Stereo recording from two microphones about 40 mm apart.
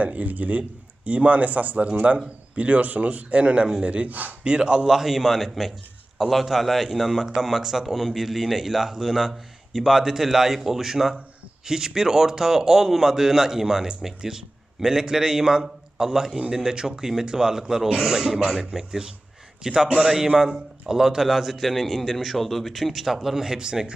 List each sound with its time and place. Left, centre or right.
0.0 s a man's voice: right
4.4 s a man's voice: right
23.6 s a man's voice: right